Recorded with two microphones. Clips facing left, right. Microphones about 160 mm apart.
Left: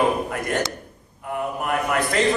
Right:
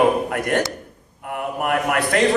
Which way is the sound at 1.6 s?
60° right (ahead or behind).